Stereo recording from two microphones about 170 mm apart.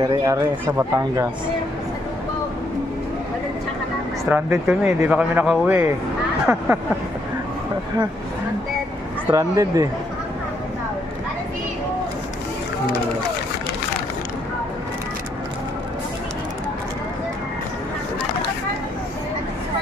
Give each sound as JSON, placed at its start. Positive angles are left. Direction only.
{"t": 0.0, "sound": "speech", "side_deg": -20}
{"t": 4.3, "sound": "a man's voice", "side_deg": -10}
{"t": 9.3, "sound": "speech", "side_deg": -20}